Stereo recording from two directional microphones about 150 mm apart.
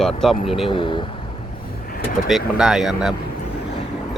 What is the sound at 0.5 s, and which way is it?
Speech, 35° left (ahead or behind).